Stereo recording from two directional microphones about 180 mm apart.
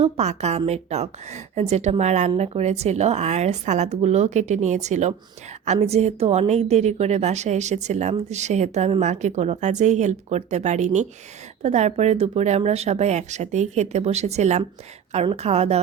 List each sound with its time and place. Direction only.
0.0 s speech: 35° right (ahead or behind)